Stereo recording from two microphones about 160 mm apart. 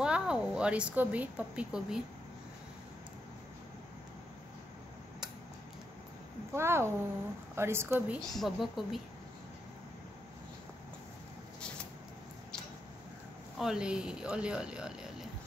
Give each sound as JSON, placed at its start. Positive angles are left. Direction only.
{"t": 0.0, "sound": "a woman's voice", "side_deg": -5}
{"t": 6.5, "sound": "a woman's voice", "side_deg": -15}
{"t": 8.2, "sound": "speech", "side_deg": 0}
{"t": 13.6, "sound": "speech", "side_deg": -5}